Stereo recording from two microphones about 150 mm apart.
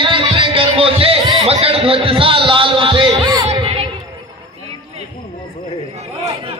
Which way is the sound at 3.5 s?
35° right (ahead or behind).